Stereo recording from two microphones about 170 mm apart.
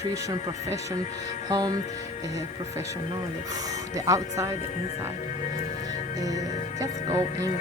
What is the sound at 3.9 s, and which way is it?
Speech, 20° right (ahead or behind).